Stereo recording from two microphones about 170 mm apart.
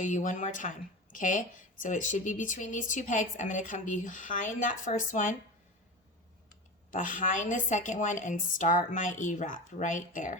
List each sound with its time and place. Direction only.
0.0 s speech: 45° left (ahead or behind)
6.9 s speech: 50° left (ahead or behind)